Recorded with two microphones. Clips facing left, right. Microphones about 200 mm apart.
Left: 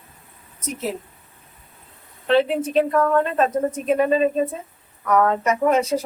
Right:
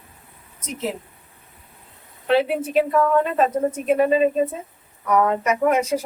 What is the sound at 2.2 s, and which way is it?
A woman's voice, 10° right (ahead or behind).